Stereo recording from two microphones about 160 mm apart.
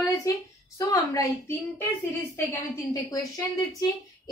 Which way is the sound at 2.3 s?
15° left (ahead or behind).